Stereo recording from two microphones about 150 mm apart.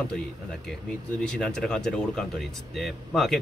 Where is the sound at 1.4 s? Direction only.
5° left (ahead or behind).